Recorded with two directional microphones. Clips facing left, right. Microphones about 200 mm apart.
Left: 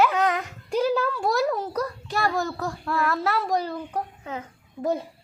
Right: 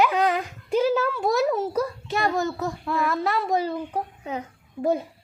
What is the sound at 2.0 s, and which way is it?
Speech, 20° right (ahead or behind).